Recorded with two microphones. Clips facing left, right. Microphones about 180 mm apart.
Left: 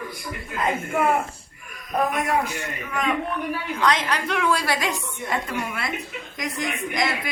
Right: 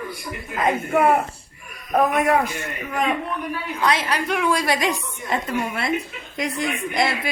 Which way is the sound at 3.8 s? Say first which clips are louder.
Right 1 dB; 10° right (ahead or behind).